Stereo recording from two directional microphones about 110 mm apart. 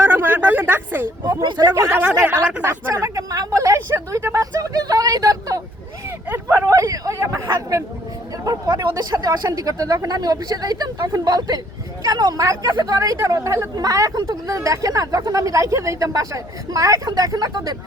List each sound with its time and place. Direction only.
0.0 s a sound: 20° right (ahead or behind)
1.5 s speech: 40° right (ahead or behind)
2.0 s speech: 15° right (ahead or behind)
2.6 s speech: 30° right (ahead or behind)
6.1 s vehicle: 20° right (ahead or behind)
6.7 s hubbub: 30° right (ahead or behind)
8.4 s speech: 35° right (ahead or behind)